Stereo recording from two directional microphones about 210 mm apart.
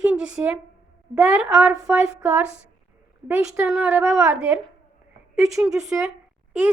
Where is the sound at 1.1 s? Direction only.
5° right (ahead or behind).